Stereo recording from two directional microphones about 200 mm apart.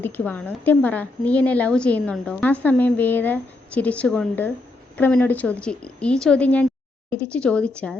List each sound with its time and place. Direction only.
0.0 s a woman's voice: 10° left (ahead or behind)